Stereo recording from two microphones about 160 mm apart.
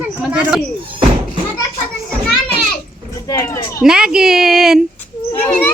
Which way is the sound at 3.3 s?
20° left (ahead or behind).